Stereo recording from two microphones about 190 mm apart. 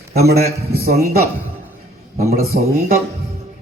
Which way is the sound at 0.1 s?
55° right (ahead or behind).